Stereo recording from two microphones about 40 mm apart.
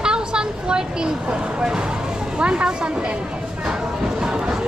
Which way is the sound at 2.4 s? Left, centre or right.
Right.